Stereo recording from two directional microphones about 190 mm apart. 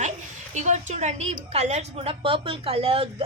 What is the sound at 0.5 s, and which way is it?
A woman's voice, 40° right (ahead or behind).